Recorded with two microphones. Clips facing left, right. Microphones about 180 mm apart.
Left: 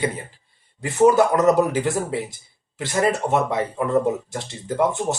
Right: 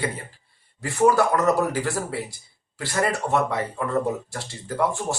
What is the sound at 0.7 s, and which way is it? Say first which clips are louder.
Speech: left 4 dB; 20° left (ahead or behind).